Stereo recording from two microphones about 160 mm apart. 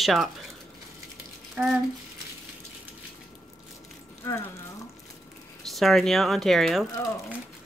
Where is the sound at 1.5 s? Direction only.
5° right (ahead or behind).